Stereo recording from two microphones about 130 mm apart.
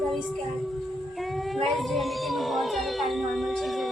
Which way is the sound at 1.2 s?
Centre (ahead or behind).